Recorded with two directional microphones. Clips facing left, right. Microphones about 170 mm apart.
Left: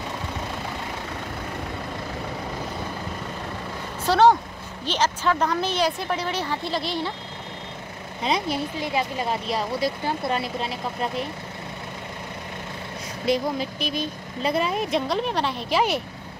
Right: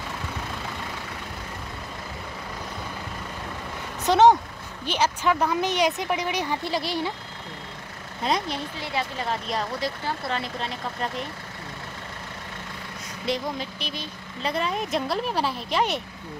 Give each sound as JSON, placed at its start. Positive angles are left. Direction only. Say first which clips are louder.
{"t": 4.0, "sound": "speech", "louder": "right 1 dB", "side_deg": -20}
{"t": 8.2, "sound": "speech", "louder": "left 2 dB", "side_deg": 5}
{"t": 13.3, "sound": "speech", "louder": "left 5 dB", "side_deg": 10}